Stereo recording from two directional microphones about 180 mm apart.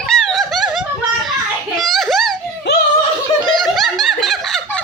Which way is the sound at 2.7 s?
70° left (ahead or behind).